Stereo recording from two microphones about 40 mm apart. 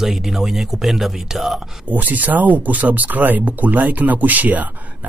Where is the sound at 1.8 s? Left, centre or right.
Right.